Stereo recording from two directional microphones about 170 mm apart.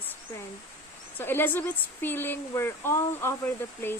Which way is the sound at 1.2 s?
10° left (ahead or behind).